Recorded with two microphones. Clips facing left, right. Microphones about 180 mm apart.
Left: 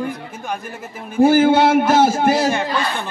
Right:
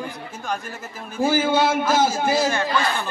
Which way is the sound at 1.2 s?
65° left (ahead or behind).